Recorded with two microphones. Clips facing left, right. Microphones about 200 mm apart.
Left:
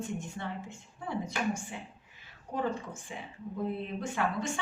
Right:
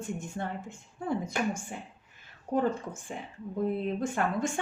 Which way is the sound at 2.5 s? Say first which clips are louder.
Right 5 dB; 50° right (ahead or behind).